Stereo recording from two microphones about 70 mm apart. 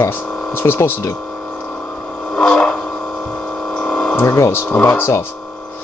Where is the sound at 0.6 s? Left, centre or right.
Left.